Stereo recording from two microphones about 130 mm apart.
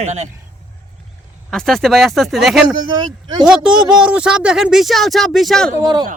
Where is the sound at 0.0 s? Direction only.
60° right (ahead or behind).